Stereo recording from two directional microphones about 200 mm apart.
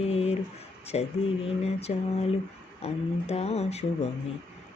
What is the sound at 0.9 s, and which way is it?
Speech, 30° left (ahead or behind).